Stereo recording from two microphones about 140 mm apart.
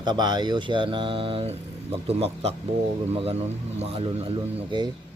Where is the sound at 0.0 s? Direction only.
30° right (ahead or behind).